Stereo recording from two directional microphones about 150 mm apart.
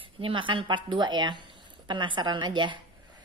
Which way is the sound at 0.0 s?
35° right (ahead or behind).